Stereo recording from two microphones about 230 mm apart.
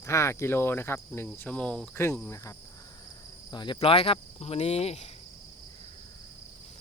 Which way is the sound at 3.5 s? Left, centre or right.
Centre.